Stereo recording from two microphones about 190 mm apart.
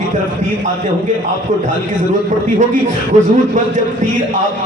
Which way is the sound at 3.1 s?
40° right (ahead or behind).